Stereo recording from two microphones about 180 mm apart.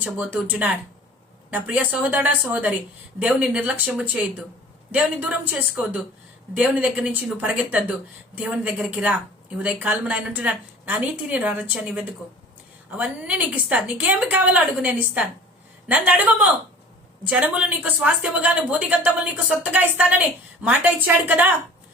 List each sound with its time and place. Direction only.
0.0 s speech: 10° right (ahead or behind)